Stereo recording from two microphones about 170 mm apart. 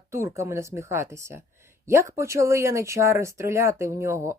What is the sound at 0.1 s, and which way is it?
Speech, 15° right (ahead or behind).